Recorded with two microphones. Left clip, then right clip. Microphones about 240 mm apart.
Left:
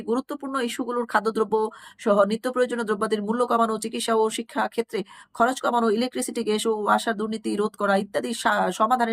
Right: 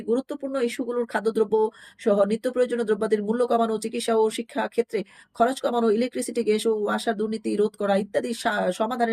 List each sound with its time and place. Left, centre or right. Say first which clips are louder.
0.1 s speech: right 1 dB; centre